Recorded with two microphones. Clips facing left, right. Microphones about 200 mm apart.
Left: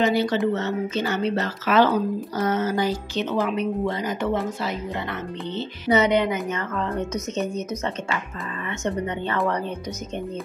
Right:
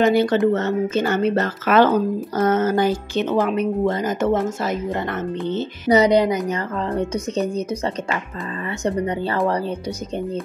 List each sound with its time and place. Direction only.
0.0 s speech: 50° right (ahead or behind); by 9.4 s 35° right (ahead or behind)